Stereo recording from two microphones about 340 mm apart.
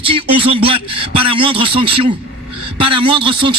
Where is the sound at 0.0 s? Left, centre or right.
Centre.